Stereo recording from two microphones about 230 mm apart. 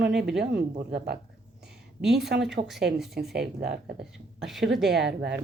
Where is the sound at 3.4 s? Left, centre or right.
Right.